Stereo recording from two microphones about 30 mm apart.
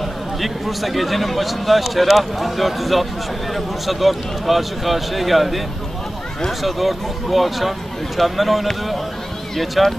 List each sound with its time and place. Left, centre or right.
0.4 s speech: centre
6.6 s speech: centre